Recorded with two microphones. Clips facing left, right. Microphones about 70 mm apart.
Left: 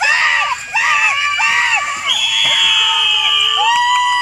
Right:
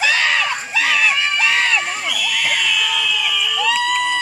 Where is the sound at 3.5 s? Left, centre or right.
Centre.